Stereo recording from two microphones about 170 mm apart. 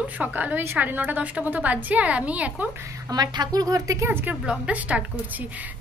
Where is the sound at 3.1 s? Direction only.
25° right (ahead or behind).